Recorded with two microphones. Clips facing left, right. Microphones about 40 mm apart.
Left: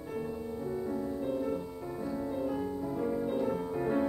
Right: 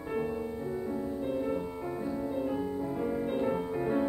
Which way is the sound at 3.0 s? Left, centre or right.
Right.